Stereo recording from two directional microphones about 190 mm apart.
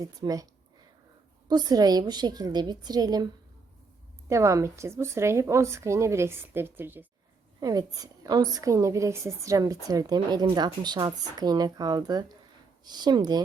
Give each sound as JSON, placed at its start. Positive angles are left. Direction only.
{"t": 0.0, "sound": "a woman's voice", "side_deg": -20}
{"t": 1.5, "sound": "a woman's voice", "side_deg": -20}
{"t": 4.3, "sound": "a woman's voice", "side_deg": -15}